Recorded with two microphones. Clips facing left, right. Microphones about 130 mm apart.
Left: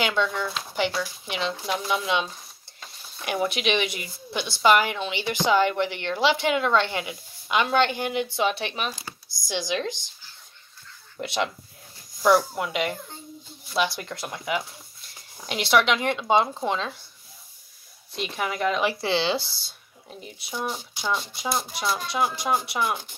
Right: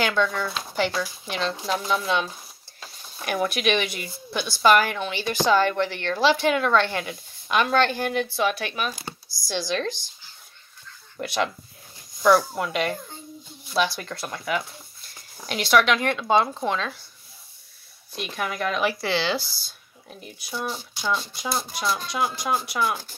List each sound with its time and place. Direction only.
0.0 s speech: 20° left (ahead or behind)
2.2 s a sound: 5° right (ahead or behind)
3.3 s speech: 20° left (ahead or behind)
11.1 s speech: 20° left (ahead or behind)
18.1 s speech: 20° left (ahead or behind)
21.9 s speech: 25° left (ahead or behind)